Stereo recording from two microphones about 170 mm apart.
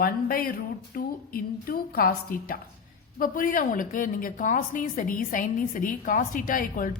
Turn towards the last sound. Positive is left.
turn(degrees=50)  # may be behind; listen again after turning